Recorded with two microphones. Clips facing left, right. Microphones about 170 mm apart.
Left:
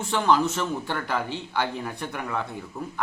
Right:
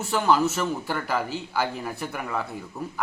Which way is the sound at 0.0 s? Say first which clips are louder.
Even; 5° right (ahead or behind).